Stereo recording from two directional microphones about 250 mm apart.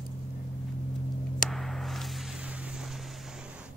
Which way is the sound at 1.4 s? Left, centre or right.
Centre.